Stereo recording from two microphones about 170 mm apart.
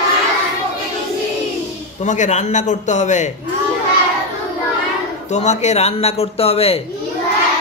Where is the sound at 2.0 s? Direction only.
45° left (ahead or behind).